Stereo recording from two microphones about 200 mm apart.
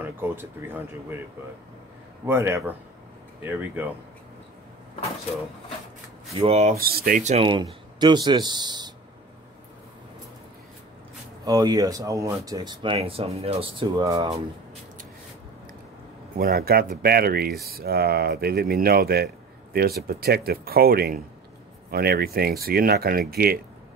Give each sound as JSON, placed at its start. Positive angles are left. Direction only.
{"t": 0.0, "sound": "speech", "side_deg": -10}
{"t": 2.2, "sound": "speech", "side_deg": -10}
{"t": 6.3, "sound": "speech", "side_deg": -30}
{"t": 6.8, "sound": "speech", "side_deg": -50}
{"t": 11.4, "sound": "speech", "side_deg": -20}
{"t": 16.3, "sound": "speech", "side_deg": -50}